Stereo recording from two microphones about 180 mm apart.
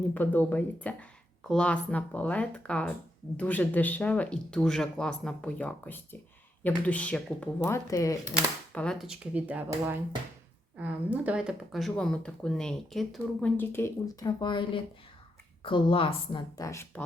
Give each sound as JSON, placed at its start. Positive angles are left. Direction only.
{"t": 0.1, "sound": "speech", "side_deg": 10}
{"t": 7.9, "sound": "speech", "side_deg": 15}
{"t": 8.7, "sound": "speech", "side_deg": 5}
{"t": 13.6, "sound": "a woman's voice", "side_deg": 15}